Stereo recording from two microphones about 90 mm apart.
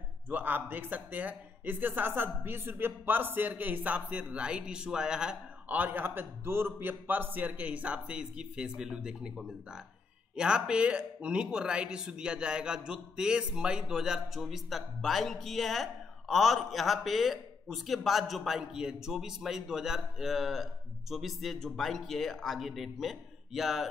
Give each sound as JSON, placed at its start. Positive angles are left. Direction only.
{"t": 0.3, "sound": "a man's voice", "side_deg": -20}